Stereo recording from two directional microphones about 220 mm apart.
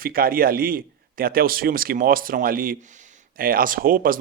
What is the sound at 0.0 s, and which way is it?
Speech, 40° right (ahead or behind).